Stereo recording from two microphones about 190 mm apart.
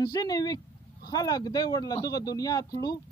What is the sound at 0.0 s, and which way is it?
Speech, 20° left (ahead or behind).